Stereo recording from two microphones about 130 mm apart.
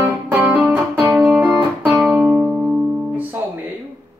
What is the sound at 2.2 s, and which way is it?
Music, 10° right (ahead or behind).